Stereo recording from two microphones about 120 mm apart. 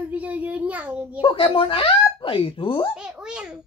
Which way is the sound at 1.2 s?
50° left (ahead or behind).